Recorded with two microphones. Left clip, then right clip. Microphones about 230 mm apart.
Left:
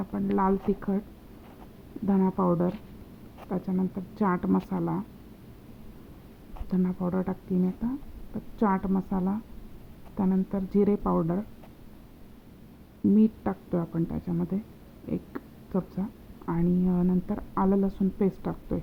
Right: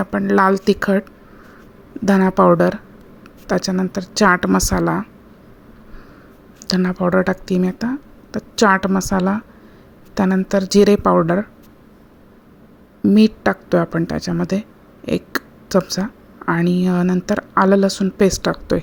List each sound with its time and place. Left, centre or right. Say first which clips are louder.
0.0 s speech: right 13 dB; right
2.0 s speech: right 14 dB; right
6.7 s speech: right 13 dB; right
13.1 s speech: right 13 dB; right
15.1 s a sound: right 15 dB; right
16.5 s speech: right 11 dB; right